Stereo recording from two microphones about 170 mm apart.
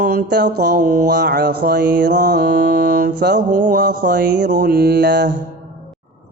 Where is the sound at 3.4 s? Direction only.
50° right (ahead or behind).